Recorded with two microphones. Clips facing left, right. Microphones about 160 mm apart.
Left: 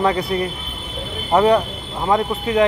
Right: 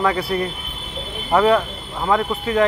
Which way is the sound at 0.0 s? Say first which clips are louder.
Left 1 dB; 25° left (ahead or behind).